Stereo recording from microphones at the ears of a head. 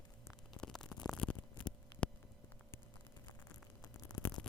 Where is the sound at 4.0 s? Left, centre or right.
Left.